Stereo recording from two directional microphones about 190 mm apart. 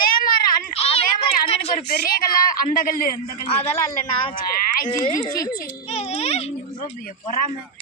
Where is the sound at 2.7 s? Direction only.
45° left (ahead or behind).